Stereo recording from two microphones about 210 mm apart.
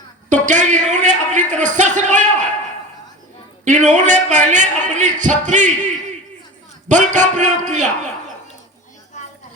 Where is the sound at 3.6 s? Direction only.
35° right (ahead or behind).